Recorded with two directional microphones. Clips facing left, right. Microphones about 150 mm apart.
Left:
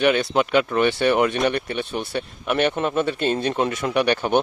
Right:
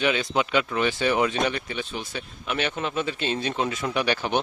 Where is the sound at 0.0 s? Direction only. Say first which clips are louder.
Left 5 dB; 60° left (ahead or behind).